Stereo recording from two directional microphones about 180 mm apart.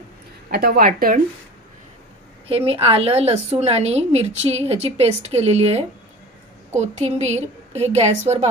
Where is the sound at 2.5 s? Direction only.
35° right (ahead or behind).